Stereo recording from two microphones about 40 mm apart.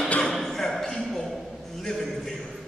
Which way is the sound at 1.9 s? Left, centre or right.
Centre.